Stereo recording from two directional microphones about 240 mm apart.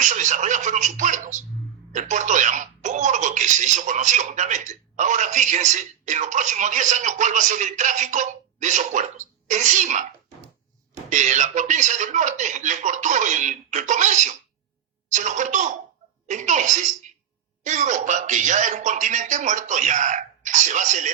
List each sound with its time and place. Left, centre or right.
0.0 s speech: right
11.1 s speech: right